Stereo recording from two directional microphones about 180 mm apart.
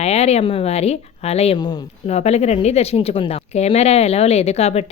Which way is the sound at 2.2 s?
35° left (ahead or behind).